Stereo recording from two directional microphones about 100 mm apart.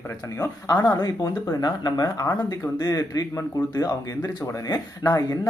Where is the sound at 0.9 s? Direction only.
35° left (ahead or behind).